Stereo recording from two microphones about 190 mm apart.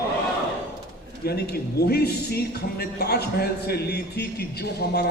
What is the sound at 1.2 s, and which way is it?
A man's voice, 55° left (ahead or behind).